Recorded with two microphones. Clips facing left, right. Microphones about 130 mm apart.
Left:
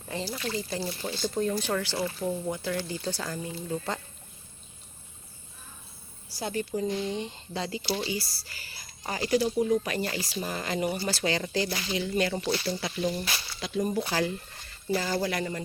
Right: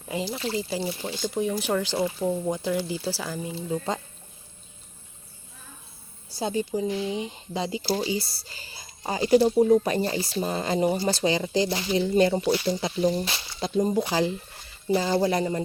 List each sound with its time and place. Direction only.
0.1 s speech: 15° right (ahead or behind)
0.3 s speech: 25° right (ahead or behind)
0.8 s speech: 15° right (ahead or behind)
6.4 s speech: 20° right (ahead or behind)
7.8 s speech: 35° right (ahead or behind)
8.0 s speech: 25° right (ahead or behind)
12.5 s speech: 15° right (ahead or behind)
13.0 s speech: 30° right (ahead or behind)